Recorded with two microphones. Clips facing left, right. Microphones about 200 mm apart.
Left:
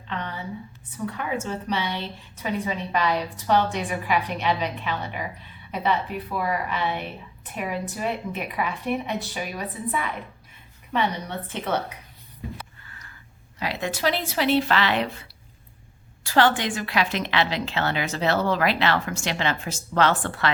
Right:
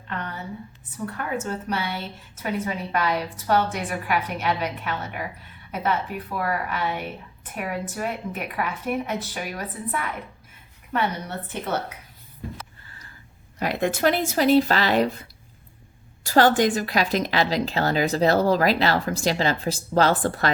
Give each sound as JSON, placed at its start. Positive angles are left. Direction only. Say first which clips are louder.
{"t": 1.1, "sound": "a woman's voice", "louder": "right 1 dB", "side_deg": -5}
{"t": 13.6, "sound": "a woman's voice", "louder": "right 4 dB", "side_deg": -50}